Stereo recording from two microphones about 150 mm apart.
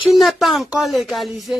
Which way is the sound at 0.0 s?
Centre (ahead or behind).